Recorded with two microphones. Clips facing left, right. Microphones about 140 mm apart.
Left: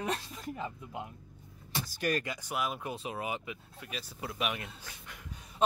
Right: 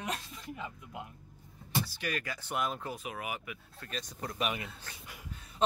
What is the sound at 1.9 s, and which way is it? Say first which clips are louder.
Speech: left 5 dB; 45° left (ahead or behind).